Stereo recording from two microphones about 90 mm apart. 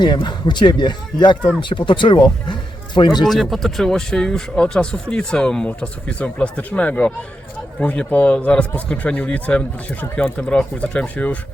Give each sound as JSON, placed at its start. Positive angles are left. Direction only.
{"t": 0.0, "sound": "speech", "side_deg": 60}
{"t": 3.2, "sound": "speech", "side_deg": 0}